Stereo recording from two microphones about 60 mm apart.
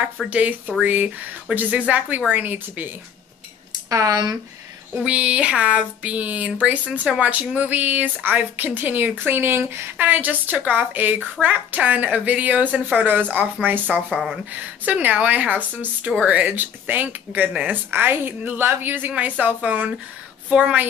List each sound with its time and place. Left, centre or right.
0.3 s speech: right
3.9 s speech: right
4.9 s a woman's voice: right
9.9 s a woman's voice: right
14.1 s speech: centre
14.9 s speech: right
17.9 s a woman's voice: right